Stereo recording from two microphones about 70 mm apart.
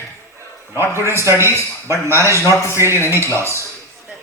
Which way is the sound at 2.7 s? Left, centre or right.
Right.